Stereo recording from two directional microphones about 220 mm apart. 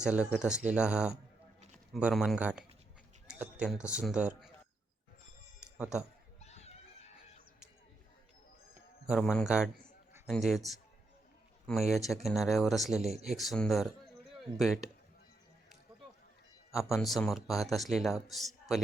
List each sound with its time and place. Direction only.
0.0 s a man's voice: 5° right (ahead or behind)
3.2 s a sound: 5° right (ahead or behind)
3.8 s a man's voice: 5° right (ahead or behind)
5.7 s speech: 5° right (ahead or behind)
6.4 s screaming: 30° left (ahead or behind)
9.0 s a man's voice: centre (ahead or behind)
16.7 s a man's voice: centre (ahead or behind)